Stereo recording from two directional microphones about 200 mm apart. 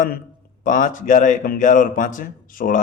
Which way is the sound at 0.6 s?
40° left (ahead or behind).